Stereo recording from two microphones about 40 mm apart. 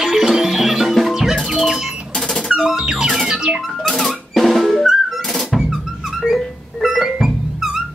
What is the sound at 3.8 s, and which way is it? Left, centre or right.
Drum, centre.